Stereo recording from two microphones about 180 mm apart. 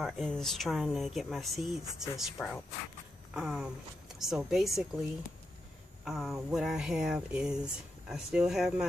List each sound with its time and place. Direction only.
0.0 s speech: centre (ahead or behind)
6.0 s speech: centre (ahead or behind)